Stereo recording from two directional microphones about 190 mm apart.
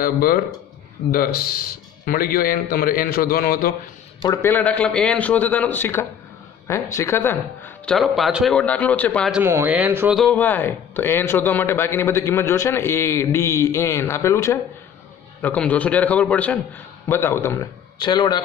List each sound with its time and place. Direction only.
0.0 s a man's voice: 50° left (ahead or behind)
4.3 s speech: 10° left (ahead or behind)
9.3 s speech: 10° right (ahead or behind)
10.1 s speech: 5° left (ahead or behind); by 18.4 s 20° left (ahead or behind)